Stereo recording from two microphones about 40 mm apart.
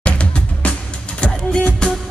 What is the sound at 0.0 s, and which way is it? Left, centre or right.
Music, left.